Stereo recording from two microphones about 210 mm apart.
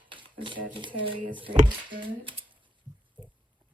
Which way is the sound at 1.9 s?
25° right (ahead or behind).